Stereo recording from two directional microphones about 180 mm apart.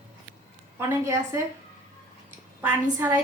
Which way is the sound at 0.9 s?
15° right (ahead or behind).